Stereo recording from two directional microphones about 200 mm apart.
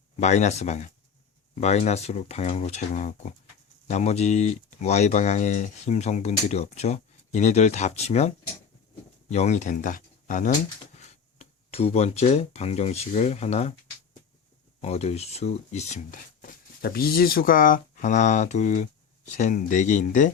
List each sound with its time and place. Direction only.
0.2 s speech: 35° left (ahead or behind)
9.3 s speech: 35° left (ahead or behind)
14.8 s speech: 30° left (ahead or behind)